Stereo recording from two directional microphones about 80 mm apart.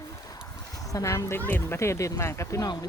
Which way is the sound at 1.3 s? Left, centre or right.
Left.